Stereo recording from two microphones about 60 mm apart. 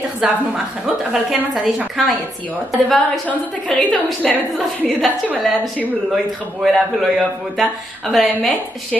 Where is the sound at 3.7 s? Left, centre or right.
Centre.